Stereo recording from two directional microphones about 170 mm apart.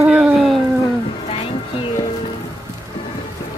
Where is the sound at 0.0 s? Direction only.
5° right (ahead or behind).